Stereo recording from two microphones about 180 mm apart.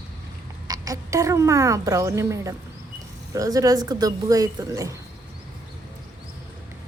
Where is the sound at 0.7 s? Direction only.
20° right (ahead or behind).